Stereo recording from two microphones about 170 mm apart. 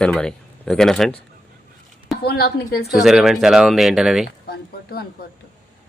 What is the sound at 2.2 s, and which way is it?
Speech, 70° left (ahead or behind).